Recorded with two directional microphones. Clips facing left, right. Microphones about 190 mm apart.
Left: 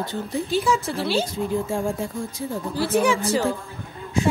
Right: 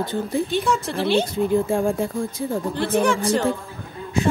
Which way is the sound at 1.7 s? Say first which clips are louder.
Right 4 dB; 55° right (ahead or behind).